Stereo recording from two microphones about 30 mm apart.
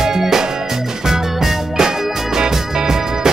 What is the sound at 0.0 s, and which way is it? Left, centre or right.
Music, centre.